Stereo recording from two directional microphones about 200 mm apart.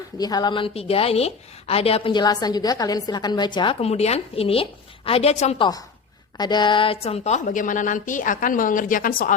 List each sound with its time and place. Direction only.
0.2 s a woman's voice: 20° left (ahead or behind); by 9.3 s 45° left (ahead or behind)